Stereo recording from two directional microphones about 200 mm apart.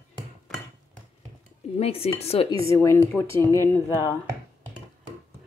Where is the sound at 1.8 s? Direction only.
30° left (ahead or behind).